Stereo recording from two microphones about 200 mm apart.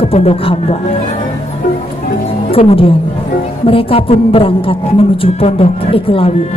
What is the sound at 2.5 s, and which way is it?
Speech, 30° left (ahead or behind).